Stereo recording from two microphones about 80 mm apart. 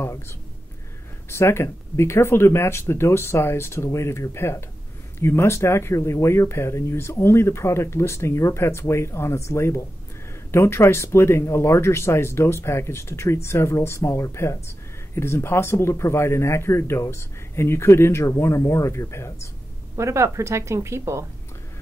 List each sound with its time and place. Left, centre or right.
1.3 s speech: left
20.0 s a woman's voice: right